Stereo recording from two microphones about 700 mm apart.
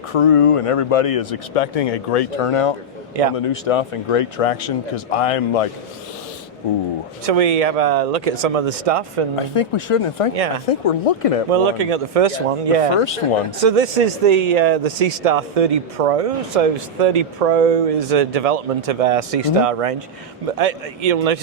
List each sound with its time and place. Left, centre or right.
0.1 s speech: left
7.3 s speech: right
9.3 s speech: left
11.5 s speech: right